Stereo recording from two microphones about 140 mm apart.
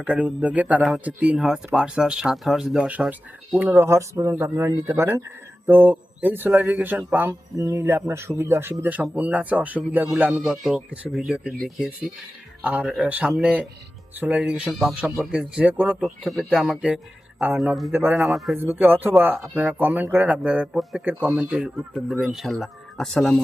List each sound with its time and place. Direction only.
0.0 s speech: 10° right (ahead or behind)
12.6 s speech: 10° right (ahead or behind)
16.2 s speech: centre (ahead or behind)
18.2 s speech: centre (ahead or behind)
18.5 s speech: 15° right (ahead or behind); by 23.4 s 5° left (ahead or behind)